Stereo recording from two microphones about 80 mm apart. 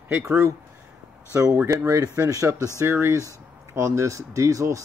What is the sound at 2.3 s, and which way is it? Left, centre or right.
Speech, right.